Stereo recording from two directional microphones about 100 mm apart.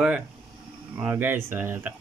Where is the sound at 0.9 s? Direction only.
20° right (ahead or behind).